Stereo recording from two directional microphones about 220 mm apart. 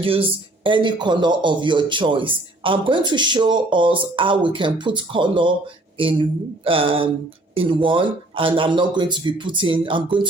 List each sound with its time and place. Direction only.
0.0 s speech: 25° right (ahead or behind)